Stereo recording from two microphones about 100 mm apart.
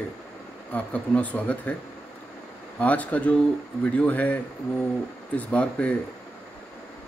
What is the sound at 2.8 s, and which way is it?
Speech, 15° left (ahead or behind).